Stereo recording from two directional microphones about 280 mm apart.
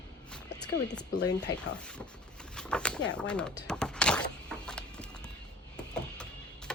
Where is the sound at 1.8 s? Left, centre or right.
Centre.